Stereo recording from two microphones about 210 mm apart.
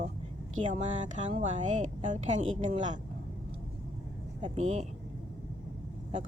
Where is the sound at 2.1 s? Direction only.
35° right (ahead or behind).